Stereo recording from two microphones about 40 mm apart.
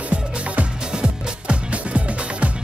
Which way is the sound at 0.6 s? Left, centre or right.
Right.